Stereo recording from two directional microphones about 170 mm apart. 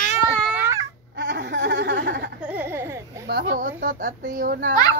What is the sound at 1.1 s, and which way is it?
Laughter, 85° right.